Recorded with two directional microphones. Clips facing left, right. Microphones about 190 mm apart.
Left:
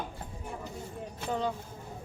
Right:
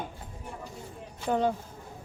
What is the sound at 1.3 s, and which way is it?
Speech, 50° right (ahead or behind).